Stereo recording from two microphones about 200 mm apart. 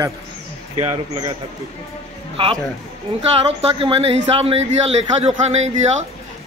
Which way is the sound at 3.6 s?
30° right (ahead or behind).